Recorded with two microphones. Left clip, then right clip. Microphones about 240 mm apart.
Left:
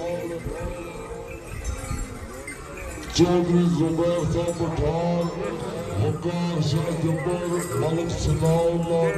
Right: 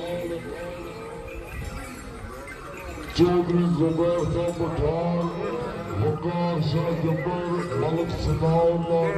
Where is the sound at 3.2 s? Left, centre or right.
Left.